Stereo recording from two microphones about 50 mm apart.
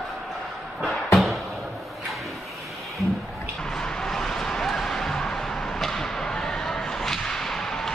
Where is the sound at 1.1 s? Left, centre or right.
Centre.